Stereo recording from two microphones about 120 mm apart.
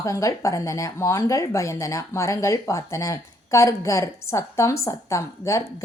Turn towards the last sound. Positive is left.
turn(degrees=25)  # may be behind; listen again after turning